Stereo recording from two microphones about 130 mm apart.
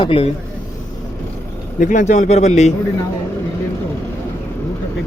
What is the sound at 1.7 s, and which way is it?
Speech, 80° left.